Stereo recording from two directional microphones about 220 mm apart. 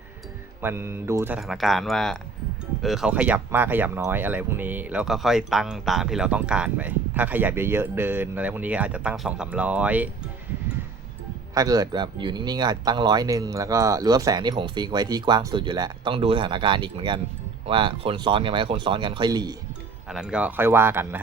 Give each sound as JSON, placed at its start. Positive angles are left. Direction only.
{"t": 0.6, "sound": "speech", "side_deg": -10}
{"t": 11.5, "sound": "speech", "side_deg": -15}
{"t": 20.1, "sound": "speech", "side_deg": -5}